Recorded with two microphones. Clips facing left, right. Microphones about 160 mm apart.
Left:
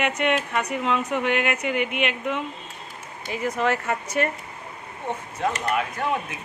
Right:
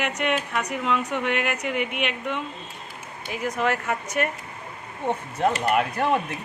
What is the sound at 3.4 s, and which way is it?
Speech, centre (ahead or behind).